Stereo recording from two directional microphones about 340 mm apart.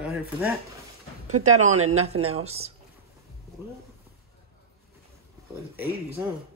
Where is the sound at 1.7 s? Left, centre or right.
Right.